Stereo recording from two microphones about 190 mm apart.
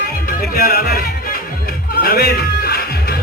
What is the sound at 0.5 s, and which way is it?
Music, 55° left (ahead or behind).